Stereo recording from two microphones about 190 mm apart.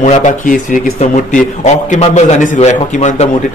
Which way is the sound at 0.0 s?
40° left (ahead or behind).